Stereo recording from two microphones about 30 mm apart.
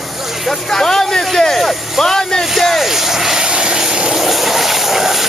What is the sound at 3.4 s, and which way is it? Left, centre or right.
Vehicle, right.